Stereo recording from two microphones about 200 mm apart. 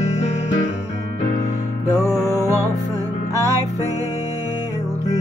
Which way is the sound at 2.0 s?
15° right (ahead or behind).